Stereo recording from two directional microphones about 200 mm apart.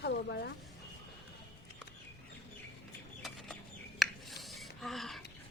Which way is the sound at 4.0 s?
Centre (ahead or behind).